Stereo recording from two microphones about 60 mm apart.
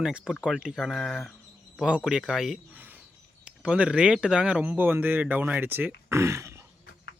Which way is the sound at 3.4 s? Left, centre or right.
Centre.